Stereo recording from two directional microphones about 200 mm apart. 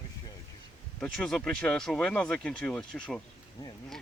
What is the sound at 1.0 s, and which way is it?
Speech, 5° left (ahead or behind).